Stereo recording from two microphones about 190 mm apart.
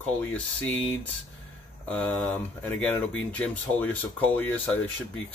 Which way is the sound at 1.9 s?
10° left (ahead or behind).